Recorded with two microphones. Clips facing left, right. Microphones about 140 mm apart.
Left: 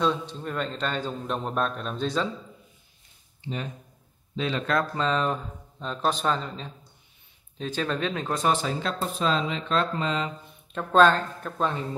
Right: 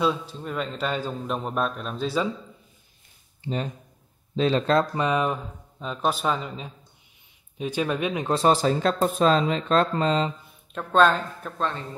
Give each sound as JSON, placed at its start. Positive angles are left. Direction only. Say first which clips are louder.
{"t": 0.0, "sound": "a man's voice", "louder": "right 1 dB", "side_deg": -5}
{"t": 4.4, "sound": "speech", "louder": "right 5 dB", "side_deg": -35}
{"t": 4.9, "sound": "speech", "louder": "right 2 dB", "side_deg": -15}
{"t": 8.3, "sound": "speech", "louder": "right 6 dB", "side_deg": -30}
{"t": 10.7, "sound": "a man's voice", "louder": "left 1 dB", "side_deg": 0}